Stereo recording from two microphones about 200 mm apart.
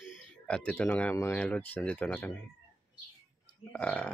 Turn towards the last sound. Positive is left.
turn(degrees=5)  # may be behind; listen again after turning